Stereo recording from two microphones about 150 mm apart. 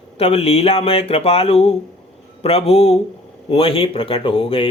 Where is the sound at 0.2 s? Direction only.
40° left (ahead or behind).